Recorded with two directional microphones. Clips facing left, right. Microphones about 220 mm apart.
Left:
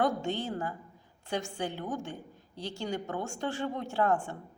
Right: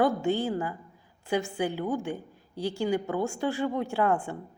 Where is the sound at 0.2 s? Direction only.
10° right (ahead or behind).